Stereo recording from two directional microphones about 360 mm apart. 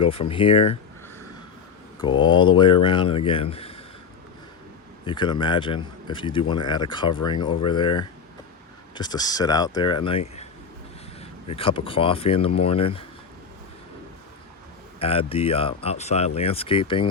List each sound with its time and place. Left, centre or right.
0.0 s speech: centre
2.0 s speech: centre
5.0 s speech: centre
14.9 s speech: centre